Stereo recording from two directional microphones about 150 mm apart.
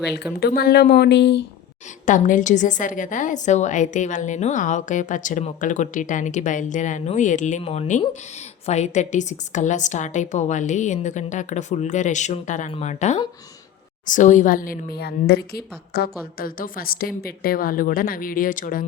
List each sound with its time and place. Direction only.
0.3 s speech: 90° left
2.0 s a woman's voice: 60° left (ahead or behind)